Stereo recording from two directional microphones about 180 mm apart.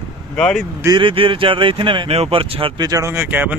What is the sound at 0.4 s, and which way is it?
Speech, 5° left (ahead or behind).